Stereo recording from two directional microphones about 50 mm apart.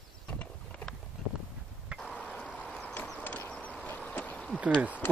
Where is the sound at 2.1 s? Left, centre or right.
Left.